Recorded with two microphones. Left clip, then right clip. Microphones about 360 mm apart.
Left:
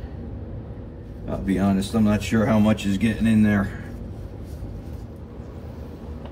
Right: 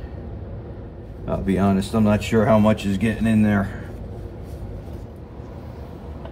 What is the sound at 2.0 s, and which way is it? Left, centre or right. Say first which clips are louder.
Speech: right 6 dB; right.